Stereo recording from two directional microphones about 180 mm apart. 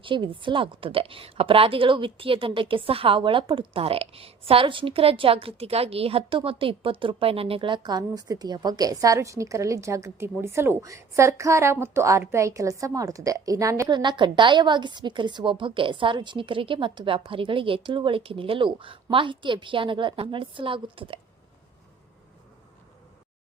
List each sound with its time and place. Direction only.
0.0 s a woman's voice: 25° right (ahead or behind)